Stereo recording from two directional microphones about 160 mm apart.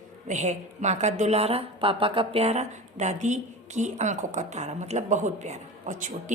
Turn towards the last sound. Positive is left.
turn(degrees=-50)  # may be behind; listen again after turning